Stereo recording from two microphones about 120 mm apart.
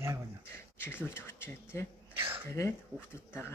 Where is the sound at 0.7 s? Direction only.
20° left (ahead or behind).